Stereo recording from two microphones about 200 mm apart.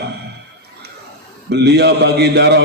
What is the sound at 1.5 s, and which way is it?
A man's voice, 55° right (ahead or behind).